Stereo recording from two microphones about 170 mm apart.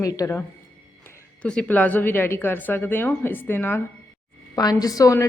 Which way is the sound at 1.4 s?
5° left (ahead or behind).